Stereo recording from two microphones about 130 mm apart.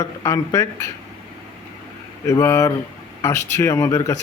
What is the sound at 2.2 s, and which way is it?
Speech, 25° left (ahead or behind).